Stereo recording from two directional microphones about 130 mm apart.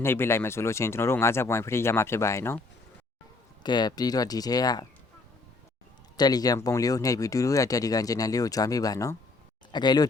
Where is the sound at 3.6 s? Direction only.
35° left (ahead or behind).